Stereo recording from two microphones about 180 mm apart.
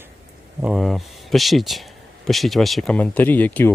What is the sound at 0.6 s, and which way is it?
Speech, centre (ahead or behind).